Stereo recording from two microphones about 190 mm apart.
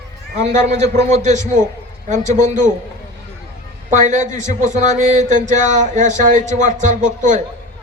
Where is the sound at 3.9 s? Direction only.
40° right (ahead or behind).